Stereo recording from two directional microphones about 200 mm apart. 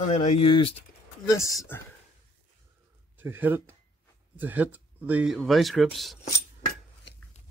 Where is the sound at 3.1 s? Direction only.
10° right (ahead or behind).